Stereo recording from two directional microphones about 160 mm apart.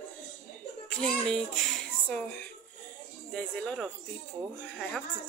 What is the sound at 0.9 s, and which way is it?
A child's voice, 5° left (ahead or behind).